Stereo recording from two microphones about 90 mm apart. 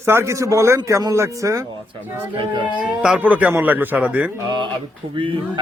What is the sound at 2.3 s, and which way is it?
Speech, 70° right (ahead or behind).